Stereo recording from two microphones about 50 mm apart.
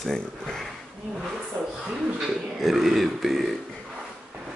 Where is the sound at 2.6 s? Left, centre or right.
Centre.